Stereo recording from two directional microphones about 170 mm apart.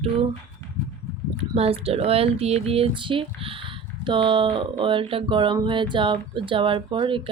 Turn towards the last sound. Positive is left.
turn(degrees=-30)  # may be behind; listen again after turning